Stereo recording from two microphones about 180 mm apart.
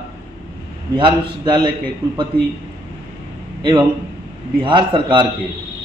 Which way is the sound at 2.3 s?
10° left (ahead or behind).